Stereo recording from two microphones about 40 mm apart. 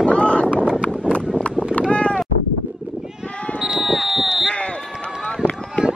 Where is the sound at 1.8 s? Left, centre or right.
Left.